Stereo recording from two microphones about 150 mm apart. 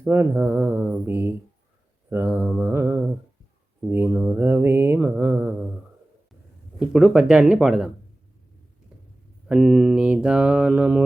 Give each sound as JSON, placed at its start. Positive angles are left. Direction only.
{"t": 0.0, "sound": "mantra", "side_deg": -15}
{"t": 6.7, "sound": "speech", "side_deg": -5}
{"t": 9.5, "sound": "mantra", "side_deg": -5}